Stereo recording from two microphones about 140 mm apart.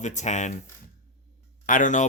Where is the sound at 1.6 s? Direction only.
70° left (ahead or behind).